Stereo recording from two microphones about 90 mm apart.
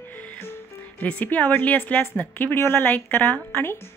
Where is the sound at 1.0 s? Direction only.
15° left (ahead or behind).